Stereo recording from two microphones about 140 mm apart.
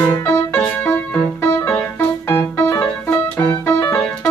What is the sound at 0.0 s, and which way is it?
Music, 20° left (ahead or behind).